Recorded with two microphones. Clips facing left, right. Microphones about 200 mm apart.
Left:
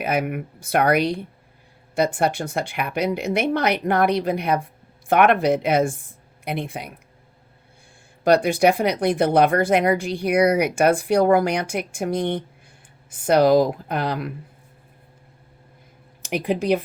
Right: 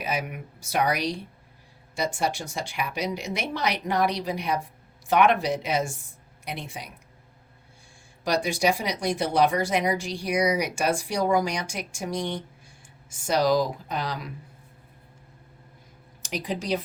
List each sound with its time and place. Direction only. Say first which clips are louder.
0.0 s speech: left 7 dB; 55° left (ahead or behind)
8.2 s speech: left 8 dB; 55° left (ahead or behind)
16.2 s speech: left 8 dB; 55° left (ahead or behind)